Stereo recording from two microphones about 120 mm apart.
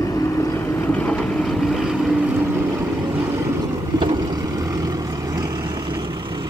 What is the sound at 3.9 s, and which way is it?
Vehicle, 35° right (ahead or behind).